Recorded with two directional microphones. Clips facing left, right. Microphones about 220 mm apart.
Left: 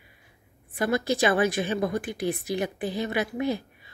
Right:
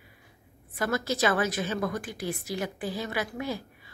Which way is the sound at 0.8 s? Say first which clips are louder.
Left 3 dB; 15° left (ahead or behind).